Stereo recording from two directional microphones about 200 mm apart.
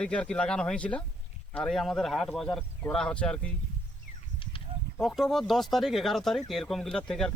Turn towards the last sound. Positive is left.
turn(degrees=5)  # may be behind; listen again after turning